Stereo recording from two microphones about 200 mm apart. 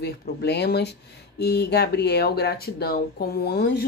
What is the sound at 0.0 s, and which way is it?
Speech, 55° left (ahead or behind).